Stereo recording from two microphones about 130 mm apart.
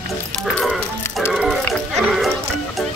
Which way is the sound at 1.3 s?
5° right (ahead or behind).